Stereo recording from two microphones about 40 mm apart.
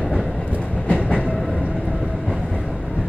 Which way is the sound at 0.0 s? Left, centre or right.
Centre.